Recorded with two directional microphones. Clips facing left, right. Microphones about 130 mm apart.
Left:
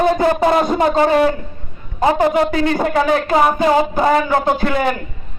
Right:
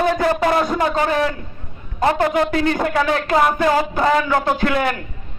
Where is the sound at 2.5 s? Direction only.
35° left (ahead or behind).